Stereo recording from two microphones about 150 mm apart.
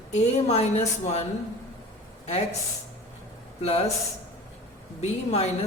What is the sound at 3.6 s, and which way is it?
Speech, 40° left (ahead or behind).